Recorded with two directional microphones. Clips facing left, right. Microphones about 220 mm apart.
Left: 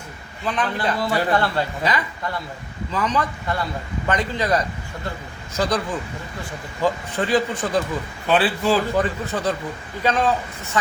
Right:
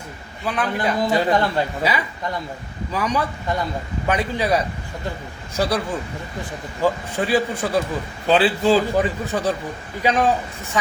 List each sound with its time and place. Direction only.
0.4 s a man's voice: 10° right (ahead or behind)
6.8 s a man's voice: 10° right (ahead or behind)
8.3 s a man's voice: 25° right (ahead or behind)
9.0 s a man's voice: 10° right (ahead or behind)